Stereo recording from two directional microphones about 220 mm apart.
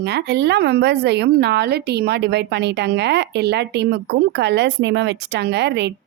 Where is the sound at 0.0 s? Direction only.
50° right (ahead or behind).